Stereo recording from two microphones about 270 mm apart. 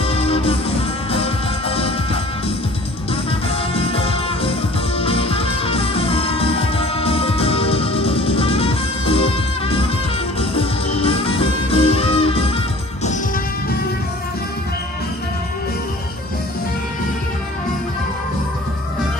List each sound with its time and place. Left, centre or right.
0.0 s music: left
3.4 s music: left